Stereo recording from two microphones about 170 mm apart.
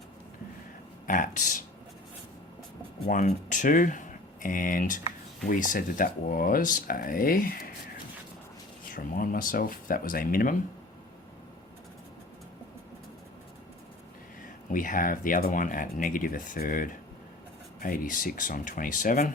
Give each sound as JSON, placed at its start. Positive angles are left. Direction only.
{"t": 1.0, "sound": "speech", "side_deg": 50}
{"t": 3.1, "sound": "speech", "side_deg": 50}
{"t": 8.9, "sound": "speech", "side_deg": 55}
{"t": 14.7, "sound": "speech", "side_deg": 50}